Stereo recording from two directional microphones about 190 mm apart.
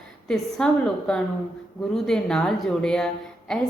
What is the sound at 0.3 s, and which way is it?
Speech, 5° left (ahead or behind).